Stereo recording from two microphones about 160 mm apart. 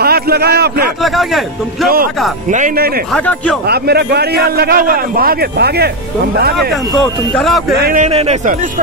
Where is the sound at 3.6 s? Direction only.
80° right.